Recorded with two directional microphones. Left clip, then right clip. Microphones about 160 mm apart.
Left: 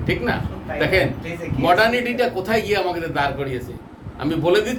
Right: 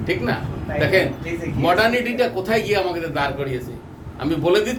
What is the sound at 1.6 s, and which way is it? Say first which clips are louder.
A man's voice: left 1 dB; 15° left (ahead or behind).